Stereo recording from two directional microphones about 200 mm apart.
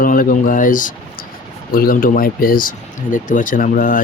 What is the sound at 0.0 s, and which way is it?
Speech, 45° left (ahead or behind).